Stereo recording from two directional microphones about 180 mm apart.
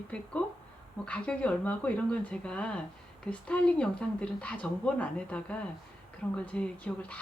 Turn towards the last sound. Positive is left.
turn(degrees=5)  # may be behind; listen again after turning